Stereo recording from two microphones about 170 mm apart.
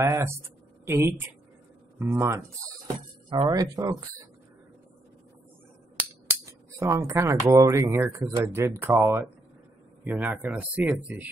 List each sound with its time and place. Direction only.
0.0 s speech: 15° right (ahead or behind)
6.4 s speech: 15° right (ahead or behind)